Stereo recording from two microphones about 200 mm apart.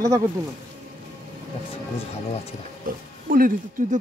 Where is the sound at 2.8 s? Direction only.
45° right (ahead or behind).